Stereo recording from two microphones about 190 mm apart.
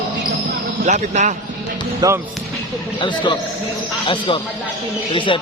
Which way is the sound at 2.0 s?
20° right (ahead or behind).